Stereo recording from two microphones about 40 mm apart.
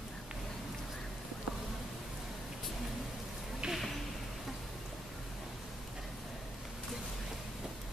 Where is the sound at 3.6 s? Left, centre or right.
Right.